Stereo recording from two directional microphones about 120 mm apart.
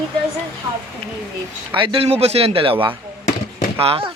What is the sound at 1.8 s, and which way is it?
Speech, 50° right (ahead or behind).